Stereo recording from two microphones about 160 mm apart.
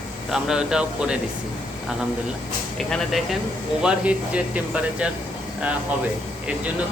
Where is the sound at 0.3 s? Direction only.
5° right (ahead or behind).